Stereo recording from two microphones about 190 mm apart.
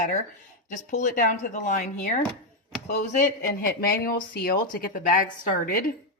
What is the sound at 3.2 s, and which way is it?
Speech, 50° left (ahead or behind).